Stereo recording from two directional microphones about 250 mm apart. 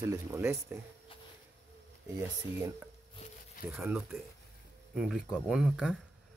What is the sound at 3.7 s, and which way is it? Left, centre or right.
Speech, centre.